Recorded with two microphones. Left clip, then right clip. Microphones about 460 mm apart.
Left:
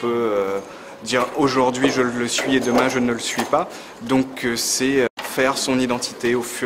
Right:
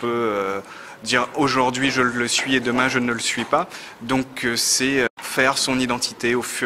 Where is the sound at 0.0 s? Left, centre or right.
Right.